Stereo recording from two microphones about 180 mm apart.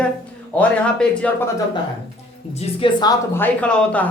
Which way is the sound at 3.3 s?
10° left (ahead or behind).